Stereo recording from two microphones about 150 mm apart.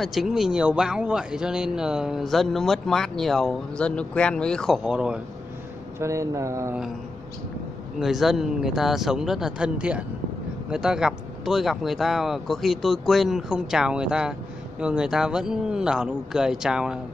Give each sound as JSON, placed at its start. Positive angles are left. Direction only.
{"t": 0.0, "sound": "speech", "side_deg": 0}
{"t": 5.9, "sound": "speech", "side_deg": -20}
{"t": 8.0, "sound": "speech", "side_deg": 0}